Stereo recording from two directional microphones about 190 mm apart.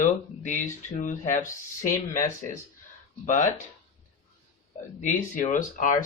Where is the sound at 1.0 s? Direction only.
40° left (ahead or behind).